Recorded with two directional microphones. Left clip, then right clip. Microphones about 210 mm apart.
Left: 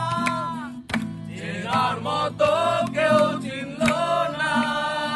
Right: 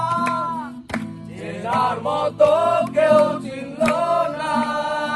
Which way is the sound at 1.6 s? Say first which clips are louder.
Right 3 dB; 5° left (ahead or behind).